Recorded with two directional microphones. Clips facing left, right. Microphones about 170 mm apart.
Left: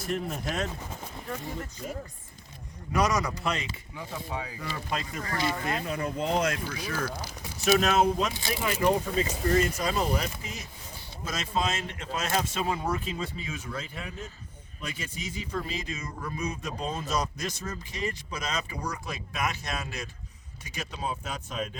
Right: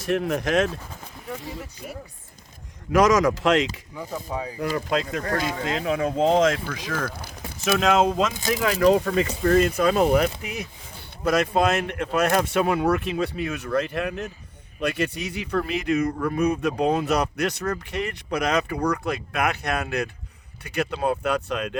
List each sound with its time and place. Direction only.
0.0 s speech: 75° right (ahead or behind)
1.3 s speech: 10° right (ahead or behind)
2.9 s speech: 90° right
3.9 s speech: 40° right (ahead or behind)
4.9 s speech: 90° right
8.3 s speech: 45° right (ahead or behind)
8.6 s speech: 85° right